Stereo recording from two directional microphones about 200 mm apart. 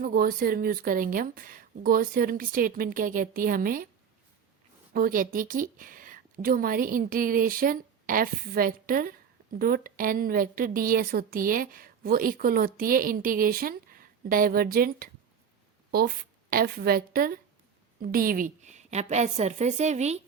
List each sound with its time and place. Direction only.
0.0 s a woman's voice: 45° right (ahead or behind)
4.9 s a woman's voice: 45° right (ahead or behind)